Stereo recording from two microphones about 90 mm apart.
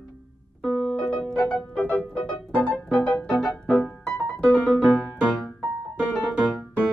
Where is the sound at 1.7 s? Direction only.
15° left (ahead or behind).